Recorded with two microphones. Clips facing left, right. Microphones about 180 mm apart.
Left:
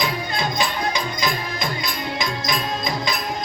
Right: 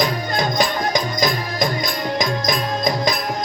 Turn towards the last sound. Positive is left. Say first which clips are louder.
# right 5 dB
turn(degrees=-40)  # may be behind; listen again after turning